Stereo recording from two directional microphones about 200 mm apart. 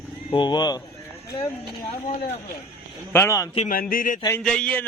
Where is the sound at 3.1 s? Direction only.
15° left (ahead or behind).